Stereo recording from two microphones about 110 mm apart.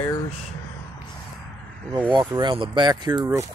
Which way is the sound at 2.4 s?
45° right (ahead or behind).